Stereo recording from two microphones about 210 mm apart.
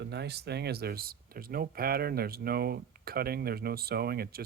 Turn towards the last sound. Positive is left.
turn(degrees=-45)  # may be behind; listen again after turning